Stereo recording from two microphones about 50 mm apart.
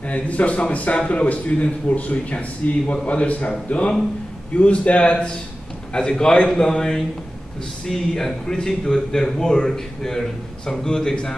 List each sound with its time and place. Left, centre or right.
0.1 s a man's voice: left